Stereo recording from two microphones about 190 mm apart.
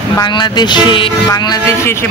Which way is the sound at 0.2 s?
25° left (ahead or behind).